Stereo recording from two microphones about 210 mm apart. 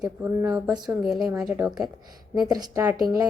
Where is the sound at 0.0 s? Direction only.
5° right (ahead or behind).